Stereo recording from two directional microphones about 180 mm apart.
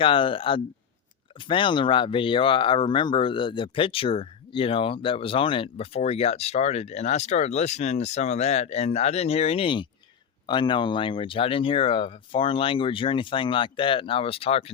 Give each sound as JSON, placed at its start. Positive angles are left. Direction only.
{"t": 0.0, "sound": "speech", "side_deg": 30}